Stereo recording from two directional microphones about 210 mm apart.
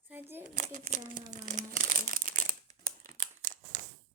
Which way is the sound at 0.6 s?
40° right (ahead or behind).